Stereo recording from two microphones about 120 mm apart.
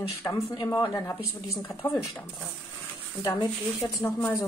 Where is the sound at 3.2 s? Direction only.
30° left (ahead or behind).